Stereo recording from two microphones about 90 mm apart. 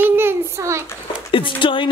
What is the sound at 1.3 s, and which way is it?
Speech, 70° left (ahead or behind).